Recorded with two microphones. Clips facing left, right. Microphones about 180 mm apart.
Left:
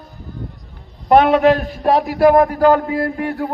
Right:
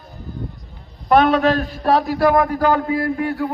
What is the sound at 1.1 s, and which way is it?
Speech, 20° left (ahead or behind).